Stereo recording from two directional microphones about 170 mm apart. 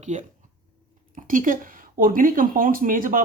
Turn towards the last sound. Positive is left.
turn(degrees=-55)  # may be behind; listen again after turning